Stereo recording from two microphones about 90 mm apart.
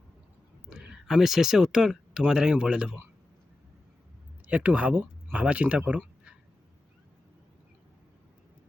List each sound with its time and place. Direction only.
0.7 s speech: 5° right (ahead or behind)
4.4 s speech: 15° right (ahead or behind)